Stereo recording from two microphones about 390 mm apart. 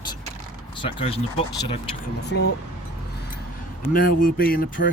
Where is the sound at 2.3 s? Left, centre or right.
Left.